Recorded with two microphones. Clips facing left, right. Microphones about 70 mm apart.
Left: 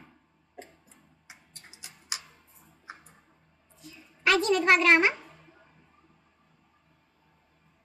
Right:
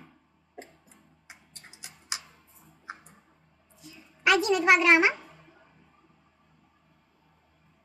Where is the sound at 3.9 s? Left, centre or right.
Centre.